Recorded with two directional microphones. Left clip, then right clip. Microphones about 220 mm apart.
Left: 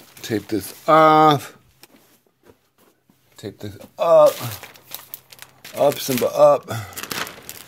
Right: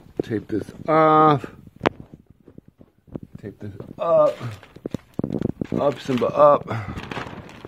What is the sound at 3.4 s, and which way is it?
Speech, 20° left (ahead or behind).